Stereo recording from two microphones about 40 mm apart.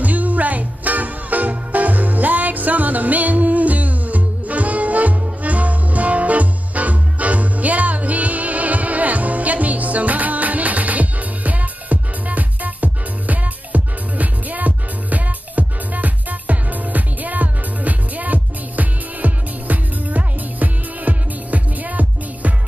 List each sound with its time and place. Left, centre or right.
0.0 s music: right